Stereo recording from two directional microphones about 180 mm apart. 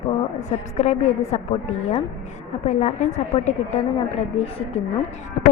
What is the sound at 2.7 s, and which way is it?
Speech, 40° left (ahead or behind).